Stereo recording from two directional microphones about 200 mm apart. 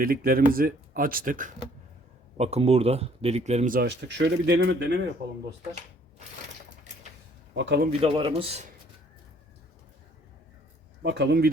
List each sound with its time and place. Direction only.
0.0 s speech: 45° right (ahead or behind)
2.4 s speech: 30° right (ahead or behind)
3.8 s speech: 60° right (ahead or behind)
7.5 s speech: 60° right (ahead or behind)
7.9 s speech: 25° right (ahead or behind)
11.0 s speech: 55° right (ahead or behind)